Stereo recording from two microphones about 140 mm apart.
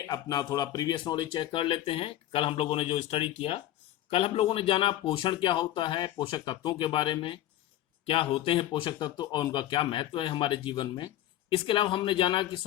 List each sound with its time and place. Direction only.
0.1 s speech: 25° left (ahead or behind)